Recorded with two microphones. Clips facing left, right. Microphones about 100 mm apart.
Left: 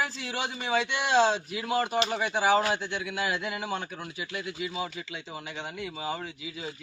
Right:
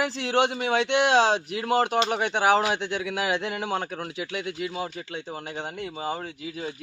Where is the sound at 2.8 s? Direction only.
90° right.